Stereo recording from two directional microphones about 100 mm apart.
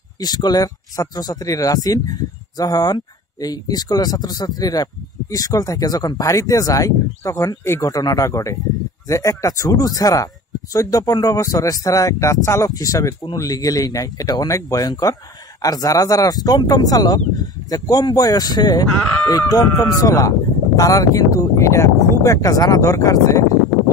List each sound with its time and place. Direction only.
0.2 s speech: 45° left (ahead or behind)